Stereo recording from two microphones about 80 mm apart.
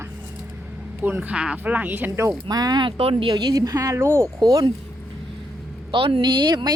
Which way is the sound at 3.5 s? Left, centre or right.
Right.